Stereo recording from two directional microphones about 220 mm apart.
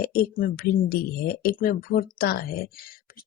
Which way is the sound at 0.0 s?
40° left (ahead or behind).